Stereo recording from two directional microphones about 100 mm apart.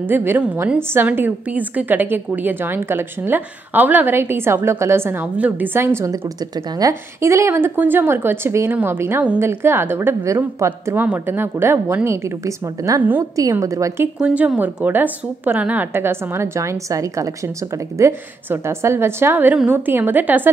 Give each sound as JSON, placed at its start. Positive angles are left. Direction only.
{"t": 0.1, "sound": "a woman's voice", "side_deg": -25}
{"t": 14.2, "sound": "a woman's voice", "side_deg": -10}